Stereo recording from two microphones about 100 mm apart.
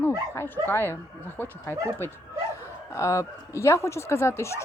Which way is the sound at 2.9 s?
30° left (ahead or behind).